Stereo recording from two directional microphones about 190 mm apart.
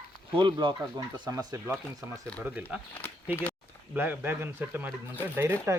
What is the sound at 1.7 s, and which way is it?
Speech, 5° left (ahead or behind).